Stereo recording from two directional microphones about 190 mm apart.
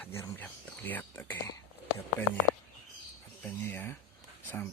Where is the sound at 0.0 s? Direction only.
10° left (ahead or behind).